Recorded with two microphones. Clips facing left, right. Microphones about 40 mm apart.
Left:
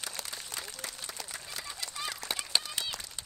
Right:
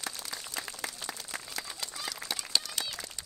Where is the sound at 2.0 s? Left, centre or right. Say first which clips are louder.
Left 2 dB; left.